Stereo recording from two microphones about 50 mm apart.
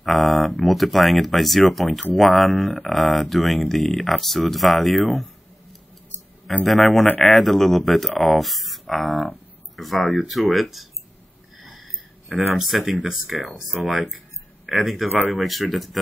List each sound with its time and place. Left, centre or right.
0.0 s speech: centre
11.5 s a sound: centre
13.1 s speech: centre